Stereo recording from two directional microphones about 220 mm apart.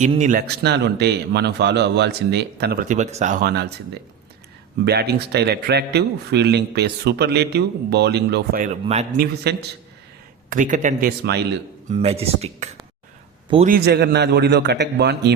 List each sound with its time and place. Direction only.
0.0 s a man's voice: 35° right (ahead or behind)
3.4 s a man's voice: 50° right (ahead or behind)
4.9 s a man's voice: 50° right (ahead or behind)
9.1 s a man's voice: 45° right (ahead or behind)
10.5 s a man's voice: 35° right (ahead or behind)
11.9 s speech: 25° right (ahead or behind)
13.7 s a man's voice: 45° right (ahead or behind)